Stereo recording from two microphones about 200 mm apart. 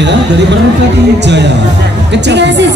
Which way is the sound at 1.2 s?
60° right (ahead or behind).